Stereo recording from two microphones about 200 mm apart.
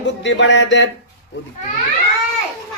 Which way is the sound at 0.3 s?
65° left (ahead or behind).